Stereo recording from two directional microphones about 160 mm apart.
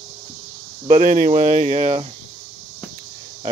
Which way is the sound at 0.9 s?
60° right (ahead or behind).